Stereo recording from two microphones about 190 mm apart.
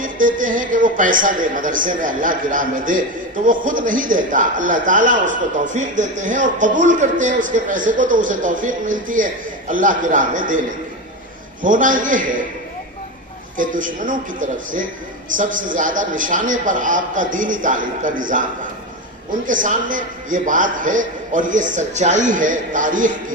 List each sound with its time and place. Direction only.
0.0 s a man's voice: 45° right (ahead or behind)
11.6 s a man's voice: 45° right (ahead or behind)
13.6 s a man's voice: 45° right (ahead or behind)
19.5 s a man's voice: 45° right (ahead or behind)